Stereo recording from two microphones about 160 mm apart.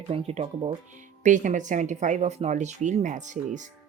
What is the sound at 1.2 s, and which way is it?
Speech, 50° right (ahead or behind).